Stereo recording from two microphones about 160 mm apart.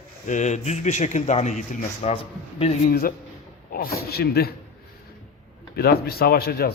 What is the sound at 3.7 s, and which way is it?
Speech, 70° left (ahead or behind).